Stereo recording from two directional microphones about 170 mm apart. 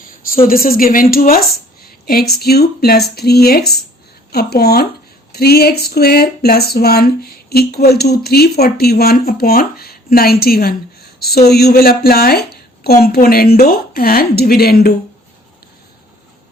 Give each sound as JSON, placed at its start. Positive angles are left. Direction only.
{"t": 0.4, "sound": "speech", "side_deg": 60}